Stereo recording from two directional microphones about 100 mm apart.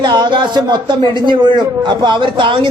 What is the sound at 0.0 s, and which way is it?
Speech, 50° right (ahead or behind).